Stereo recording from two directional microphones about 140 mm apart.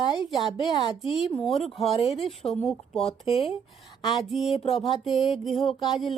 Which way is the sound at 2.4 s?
5° left (ahead or behind).